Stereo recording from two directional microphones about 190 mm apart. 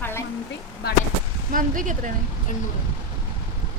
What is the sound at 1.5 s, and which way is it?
Speech, 45° right (ahead or behind).